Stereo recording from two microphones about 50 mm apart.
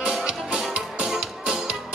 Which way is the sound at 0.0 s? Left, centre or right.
Centre.